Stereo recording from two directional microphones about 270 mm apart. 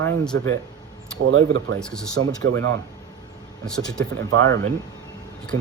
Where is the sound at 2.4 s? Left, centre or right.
Right.